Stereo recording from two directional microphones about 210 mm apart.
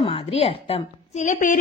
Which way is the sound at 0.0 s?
30° left (ahead or behind).